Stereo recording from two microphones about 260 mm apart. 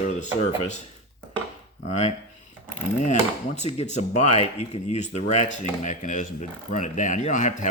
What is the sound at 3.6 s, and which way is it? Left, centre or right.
Speech, left.